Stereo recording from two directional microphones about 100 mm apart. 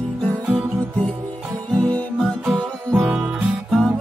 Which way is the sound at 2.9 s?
10° right (ahead or behind).